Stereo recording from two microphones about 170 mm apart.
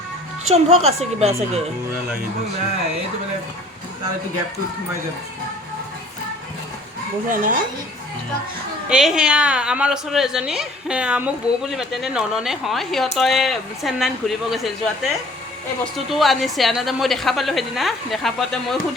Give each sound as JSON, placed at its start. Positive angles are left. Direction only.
{"t": 0.5, "sound": "a woman's voice", "side_deg": -40}
{"t": 7.3, "sound": "speech", "side_deg": -50}
{"t": 8.9, "sound": "a woman's voice", "side_deg": -5}